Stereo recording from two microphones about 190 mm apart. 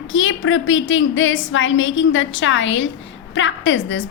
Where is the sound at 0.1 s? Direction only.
90° left.